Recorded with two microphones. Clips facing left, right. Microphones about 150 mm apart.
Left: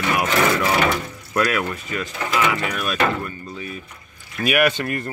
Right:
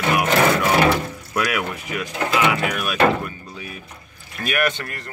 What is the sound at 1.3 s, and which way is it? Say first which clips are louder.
Speech: left 2 dB; 10° right (ahead or behind).